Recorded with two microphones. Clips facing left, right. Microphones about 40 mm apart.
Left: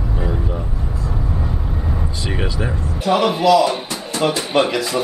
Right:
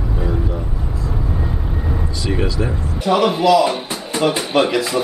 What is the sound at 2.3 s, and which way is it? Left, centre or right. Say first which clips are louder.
Speech: right 4 dB; centre.